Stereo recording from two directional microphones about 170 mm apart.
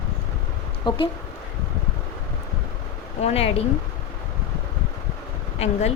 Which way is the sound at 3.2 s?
35° left (ahead or behind).